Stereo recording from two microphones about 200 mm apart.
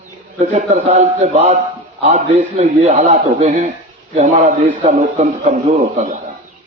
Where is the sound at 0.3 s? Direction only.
35° right (ahead or behind).